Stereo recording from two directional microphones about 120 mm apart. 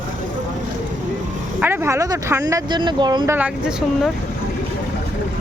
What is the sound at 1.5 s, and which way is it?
Speech, 20° right (ahead or behind).